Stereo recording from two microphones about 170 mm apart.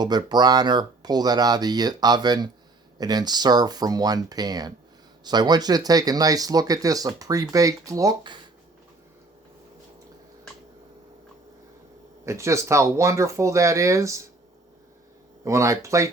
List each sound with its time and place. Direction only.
0.0 s speech: 25° right (ahead or behind)
12.2 s speech: 15° right (ahead or behind)
15.4 s speech: 15° right (ahead or behind)